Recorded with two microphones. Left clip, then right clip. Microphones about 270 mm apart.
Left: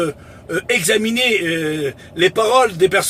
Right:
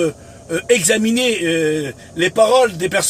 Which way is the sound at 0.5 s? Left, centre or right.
Centre.